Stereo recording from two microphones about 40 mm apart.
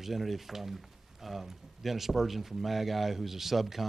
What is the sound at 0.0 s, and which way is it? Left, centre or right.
Speech, centre.